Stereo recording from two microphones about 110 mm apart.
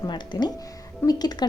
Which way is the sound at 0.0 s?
40° left (ahead or behind).